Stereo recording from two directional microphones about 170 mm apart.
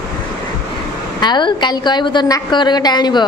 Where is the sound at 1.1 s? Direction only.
25° left (ahead or behind).